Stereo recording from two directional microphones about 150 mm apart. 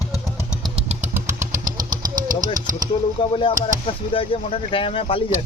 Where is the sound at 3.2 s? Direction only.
35° left (ahead or behind).